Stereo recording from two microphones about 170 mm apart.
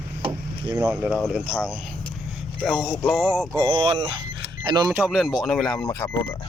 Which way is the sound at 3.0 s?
10° left (ahead or behind).